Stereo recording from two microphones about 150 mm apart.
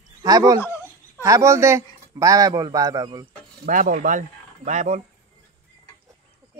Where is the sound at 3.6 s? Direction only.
60° right (ahead or behind).